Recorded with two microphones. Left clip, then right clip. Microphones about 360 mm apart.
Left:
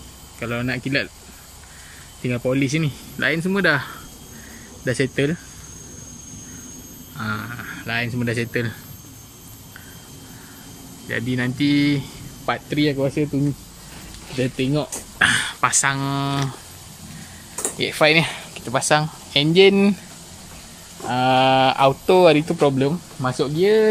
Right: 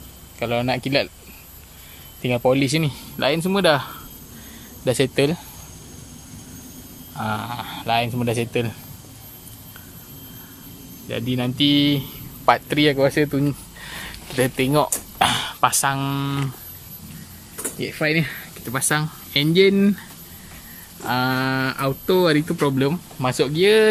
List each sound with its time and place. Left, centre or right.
0.4 s speech: centre
2.2 s speech: centre
7.2 s speech: centre
11.1 s speech: centre
12.9 s speech: right
14.6 s speech: centre
17.7 s speech: left
18.0 s speech: centre
21.1 s speech: centre